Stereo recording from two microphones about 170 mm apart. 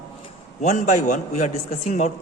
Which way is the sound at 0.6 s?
45° left (ahead or behind).